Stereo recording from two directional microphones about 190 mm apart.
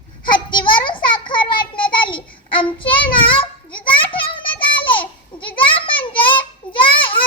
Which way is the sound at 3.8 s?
25° left (ahead or behind).